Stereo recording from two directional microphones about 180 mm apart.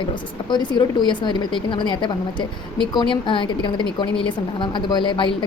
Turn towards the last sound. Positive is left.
turn(degrees=25)  # may be behind; listen again after turning